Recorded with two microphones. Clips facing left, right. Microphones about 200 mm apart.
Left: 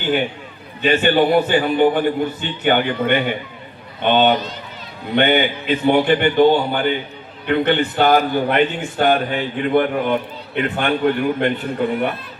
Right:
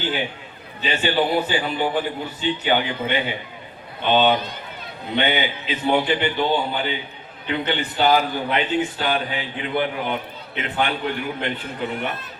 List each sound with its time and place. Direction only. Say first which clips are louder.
0.8 s a man's voice: left 6 dB; 55° left (ahead or behind)